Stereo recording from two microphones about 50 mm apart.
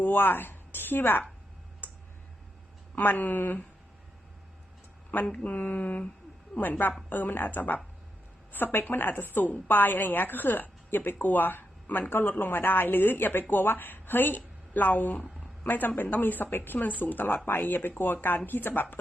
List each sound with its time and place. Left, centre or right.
0.0 s a woman's voice: left
2.9 s a woman's voice: left
5.3 s a woman's voice: left